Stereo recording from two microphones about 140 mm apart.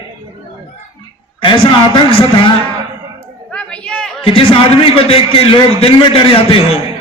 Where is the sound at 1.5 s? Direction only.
40° left (ahead or behind).